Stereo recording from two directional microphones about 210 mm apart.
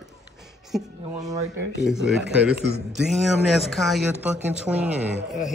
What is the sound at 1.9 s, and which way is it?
A man's voice, 5° right (ahead or behind).